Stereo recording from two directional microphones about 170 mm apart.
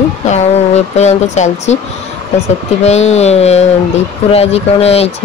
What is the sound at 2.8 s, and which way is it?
Speech, 40° left (ahead or behind).